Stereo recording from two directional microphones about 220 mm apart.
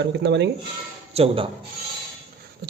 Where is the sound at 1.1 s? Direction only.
25° right (ahead or behind).